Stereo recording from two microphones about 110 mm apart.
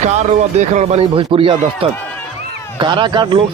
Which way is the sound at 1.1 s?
55° right (ahead or behind).